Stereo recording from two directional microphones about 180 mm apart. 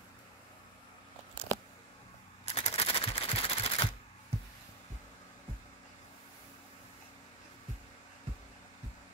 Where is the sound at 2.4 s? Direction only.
35° left (ahead or behind).